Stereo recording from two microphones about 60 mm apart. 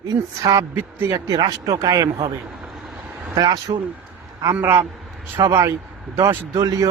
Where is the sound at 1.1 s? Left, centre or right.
Right.